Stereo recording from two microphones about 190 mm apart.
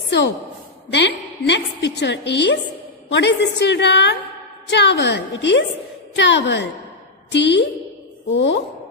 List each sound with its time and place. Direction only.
0.9 s a woman's voice: 65° left (ahead or behind)
8.3 s speech: 80° left